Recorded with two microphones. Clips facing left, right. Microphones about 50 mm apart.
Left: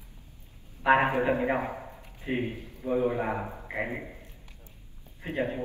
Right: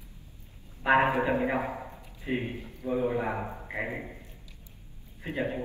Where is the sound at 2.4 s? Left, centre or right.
Right.